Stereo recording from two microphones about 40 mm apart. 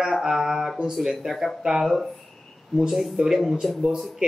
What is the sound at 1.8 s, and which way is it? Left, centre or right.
Speech, centre.